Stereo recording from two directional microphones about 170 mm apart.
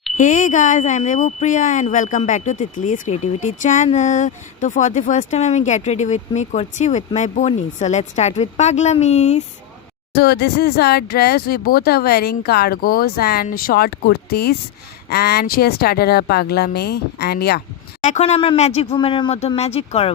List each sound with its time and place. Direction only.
0.2 s speech: 50° left (ahead or behind)
10.2 s speech: 75° left (ahead or behind)
18.0 s speech: 40° left (ahead or behind)